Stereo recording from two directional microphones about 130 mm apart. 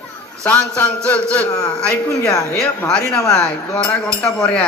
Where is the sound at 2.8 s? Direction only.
10° left (ahead or behind).